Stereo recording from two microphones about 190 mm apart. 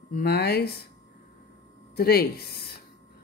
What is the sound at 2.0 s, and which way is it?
Speech, 55° left (ahead or behind).